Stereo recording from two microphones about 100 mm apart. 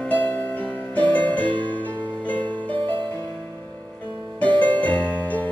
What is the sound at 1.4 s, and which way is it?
Music, 55° right (ahead or behind).